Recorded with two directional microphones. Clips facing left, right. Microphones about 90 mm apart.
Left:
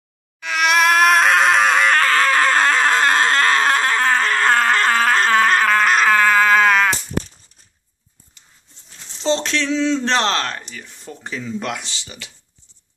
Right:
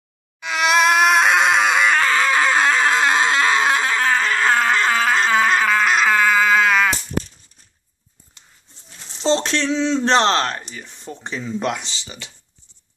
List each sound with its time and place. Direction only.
0.4 s screaming: 20° right (ahead or behind); by 7.0 s centre (ahead or behind)
9.2 s a sound: 30° right (ahead or behind)
10.0 s speech: 25° right (ahead or behind)